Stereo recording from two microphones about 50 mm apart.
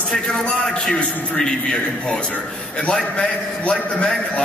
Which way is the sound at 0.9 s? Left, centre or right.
Centre.